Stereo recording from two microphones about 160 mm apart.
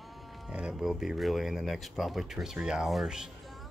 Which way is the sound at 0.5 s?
5° right (ahead or behind).